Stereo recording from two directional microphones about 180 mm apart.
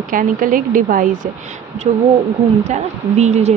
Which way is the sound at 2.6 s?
40° right (ahead or behind).